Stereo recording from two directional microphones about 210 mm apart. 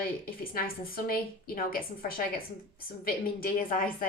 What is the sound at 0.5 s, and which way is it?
A woman's voice, 45° left (ahead or behind).